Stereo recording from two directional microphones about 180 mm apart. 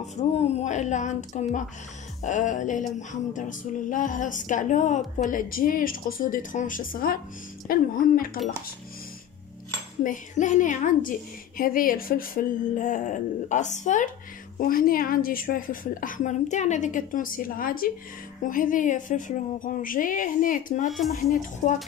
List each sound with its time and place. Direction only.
0.2 s a woman's voice: 35° left (ahead or behind); by 8.3 s 50° left (ahead or behind)
10.0 s speech: 45° left (ahead or behind)